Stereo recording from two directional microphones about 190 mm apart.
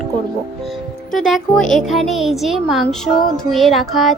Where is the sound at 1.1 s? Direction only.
Centre (ahead or behind).